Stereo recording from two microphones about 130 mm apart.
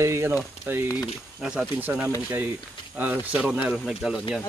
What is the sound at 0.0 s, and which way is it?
Speech, 20° right (ahead or behind).